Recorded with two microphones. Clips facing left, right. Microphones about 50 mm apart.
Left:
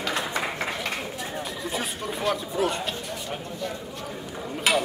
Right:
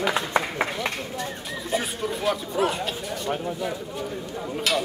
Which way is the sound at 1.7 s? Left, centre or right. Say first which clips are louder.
Right 6 dB; centre.